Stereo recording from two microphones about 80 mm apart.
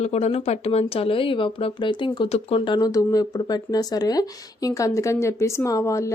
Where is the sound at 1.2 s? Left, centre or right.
Left.